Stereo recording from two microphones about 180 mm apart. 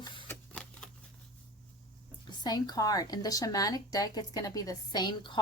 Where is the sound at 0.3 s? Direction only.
5° left (ahead or behind).